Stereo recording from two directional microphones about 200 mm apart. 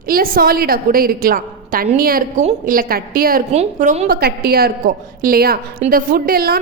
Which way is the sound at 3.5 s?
35° right (ahead or behind).